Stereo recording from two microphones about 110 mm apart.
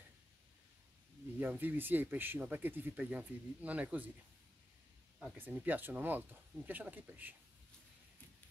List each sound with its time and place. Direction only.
1.4 s speech: 15° right (ahead or behind)
5.4 s speech: 15° right (ahead or behind)